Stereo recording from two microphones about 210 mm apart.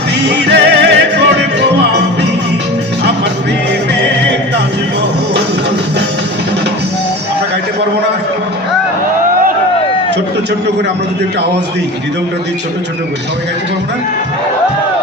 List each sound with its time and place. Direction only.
0.3 s music: 55° right (ahead or behind)
4.1 s music: 55° right (ahead or behind)